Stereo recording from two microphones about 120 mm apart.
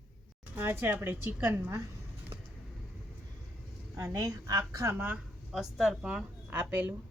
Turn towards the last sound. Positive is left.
turn(degrees=-15)  # may be behind; listen again after turning